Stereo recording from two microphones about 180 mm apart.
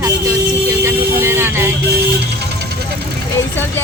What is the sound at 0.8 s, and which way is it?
Vehicle, 15° right (ahead or behind).